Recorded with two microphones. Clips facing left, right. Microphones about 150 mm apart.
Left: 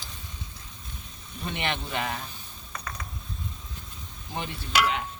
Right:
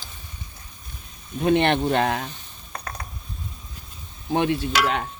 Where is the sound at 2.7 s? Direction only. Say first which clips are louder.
Right 4 dB; 55° right (ahead or behind).